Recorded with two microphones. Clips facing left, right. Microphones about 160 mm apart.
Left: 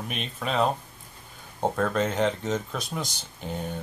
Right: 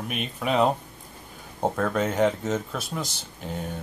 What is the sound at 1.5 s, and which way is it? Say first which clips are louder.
Speech: even; 5° right (ahead or behind).